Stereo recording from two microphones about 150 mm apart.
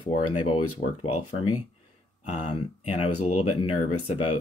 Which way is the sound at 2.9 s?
45° left (ahead or behind).